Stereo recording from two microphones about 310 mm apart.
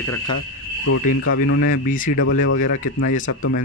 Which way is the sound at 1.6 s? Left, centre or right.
Left.